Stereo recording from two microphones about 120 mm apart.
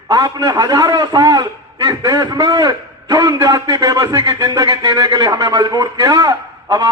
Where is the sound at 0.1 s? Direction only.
35° right (ahead or behind).